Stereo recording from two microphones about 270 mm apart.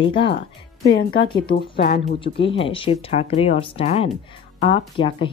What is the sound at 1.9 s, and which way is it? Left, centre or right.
A woman's voice, left.